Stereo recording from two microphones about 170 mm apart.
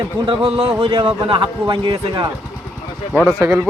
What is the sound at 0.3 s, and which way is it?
A man's voice, 35° right (ahead or behind).